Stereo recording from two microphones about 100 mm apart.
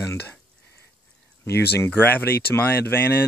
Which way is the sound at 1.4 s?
25° left (ahead or behind).